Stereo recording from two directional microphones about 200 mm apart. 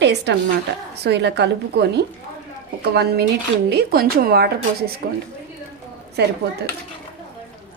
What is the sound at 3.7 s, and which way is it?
A woman's voice, 50° right (ahead or behind).